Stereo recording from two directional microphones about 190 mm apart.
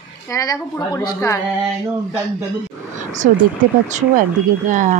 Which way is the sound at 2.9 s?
40° right (ahead or behind).